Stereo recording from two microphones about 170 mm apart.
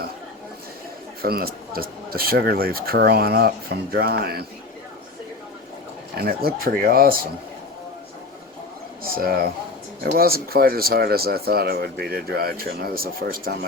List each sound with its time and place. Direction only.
1.2 s speech: 60° right (ahead or behind)
6.1 s speech: 65° right (ahead or behind)
9.1 s speech: 60° right (ahead or behind)